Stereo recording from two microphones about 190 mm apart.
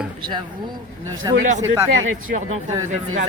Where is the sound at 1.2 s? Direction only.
20° right (ahead or behind).